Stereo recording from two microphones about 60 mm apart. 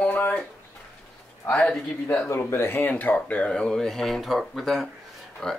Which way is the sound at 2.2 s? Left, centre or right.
Left.